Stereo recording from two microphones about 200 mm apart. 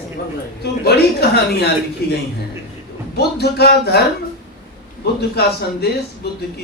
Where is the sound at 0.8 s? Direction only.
55° left (ahead or behind).